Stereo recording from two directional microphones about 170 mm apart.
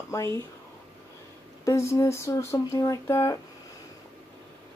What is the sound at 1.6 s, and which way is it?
Speech, 15° left (ahead or behind).